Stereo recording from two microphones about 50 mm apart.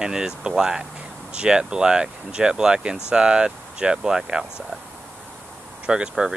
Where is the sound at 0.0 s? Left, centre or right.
Centre.